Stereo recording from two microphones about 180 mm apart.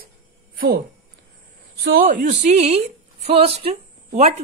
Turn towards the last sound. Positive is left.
turn(degrees=-35)  # may be behind; listen again after turning